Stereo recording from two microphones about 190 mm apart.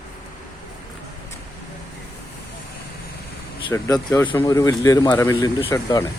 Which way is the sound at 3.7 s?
15° left (ahead or behind).